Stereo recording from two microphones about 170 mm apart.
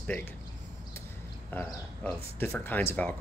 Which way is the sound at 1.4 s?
10° left (ahead or behind).